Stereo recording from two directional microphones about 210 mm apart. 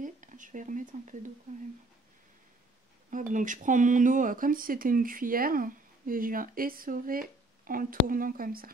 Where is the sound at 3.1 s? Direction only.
40° right (ahead or behind).